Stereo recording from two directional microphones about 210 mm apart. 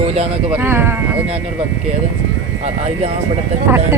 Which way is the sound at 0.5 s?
10° right (ahead or behind).